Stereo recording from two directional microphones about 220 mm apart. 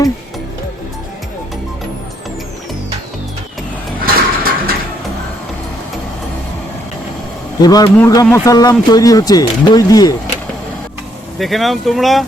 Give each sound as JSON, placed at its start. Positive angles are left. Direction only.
{"t": 4.0, "sound": "a sound", "side_deg": -40}
{"t": 7.6, "sound": "speech", "side_deg": 15}
{"t": 11.3, "sound": "speech", "side_deg": 0}